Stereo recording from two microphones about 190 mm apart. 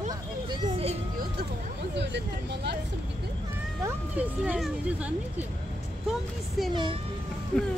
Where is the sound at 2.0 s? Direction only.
65° right (ahead or behind).